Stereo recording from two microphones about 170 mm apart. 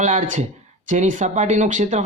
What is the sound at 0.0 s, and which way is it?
Speech, 45° right (ahead or behind).